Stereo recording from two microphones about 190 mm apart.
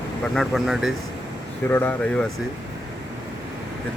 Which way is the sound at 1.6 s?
10° left (ahead or behind).